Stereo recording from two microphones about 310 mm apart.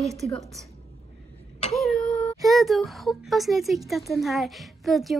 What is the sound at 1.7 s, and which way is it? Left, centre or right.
Speech, centre.